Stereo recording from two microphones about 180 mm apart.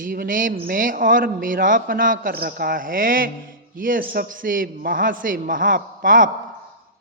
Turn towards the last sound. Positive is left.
turn(degrees=-50)  # may be behind; listen again after turning